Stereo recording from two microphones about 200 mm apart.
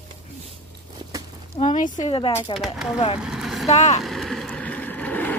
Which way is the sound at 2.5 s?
Centre (ahead or behind).